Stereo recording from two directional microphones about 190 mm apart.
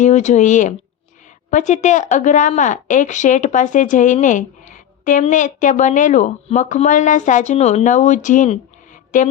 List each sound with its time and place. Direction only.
0.0 s a woman's voice: 40° left (ahead or behind)